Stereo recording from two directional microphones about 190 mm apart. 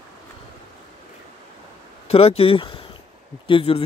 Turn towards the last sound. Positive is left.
turn(degrees=30)  # may be behind; listen again after turning